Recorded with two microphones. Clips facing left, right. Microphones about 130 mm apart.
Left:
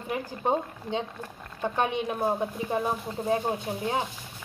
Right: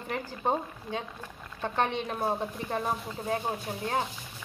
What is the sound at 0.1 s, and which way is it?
Speech, 20° left (ahead or behind).